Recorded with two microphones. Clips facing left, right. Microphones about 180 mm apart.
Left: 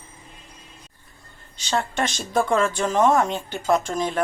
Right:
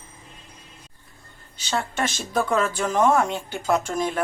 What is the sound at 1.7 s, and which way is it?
A woman's voice, 5° right (ahead or behind).